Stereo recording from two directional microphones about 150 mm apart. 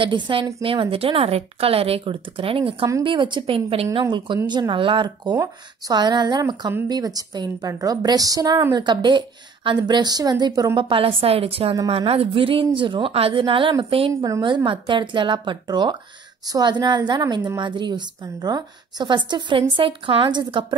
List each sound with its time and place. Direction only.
0.0 s a woman's voice: 35° right (ahead or behind)